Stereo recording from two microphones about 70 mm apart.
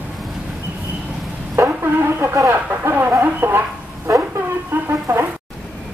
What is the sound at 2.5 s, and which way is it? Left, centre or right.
Chicken, right.